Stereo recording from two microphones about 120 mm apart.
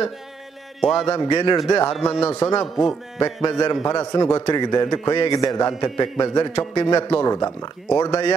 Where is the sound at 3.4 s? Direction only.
40° left (ahead or behind).